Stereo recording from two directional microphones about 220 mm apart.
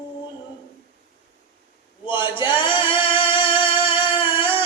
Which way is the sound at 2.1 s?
20° left (ahead or behind).